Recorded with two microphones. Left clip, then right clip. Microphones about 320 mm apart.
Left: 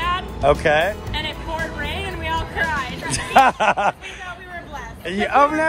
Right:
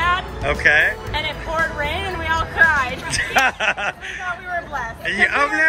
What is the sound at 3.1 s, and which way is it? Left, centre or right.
A man's voice, centre.